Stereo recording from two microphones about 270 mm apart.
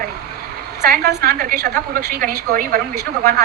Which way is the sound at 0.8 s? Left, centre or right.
Right.